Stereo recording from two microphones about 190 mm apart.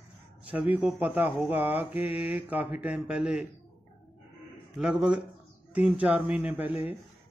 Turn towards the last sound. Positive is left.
turn(degrees=-10)  # may be behind; listen again after turning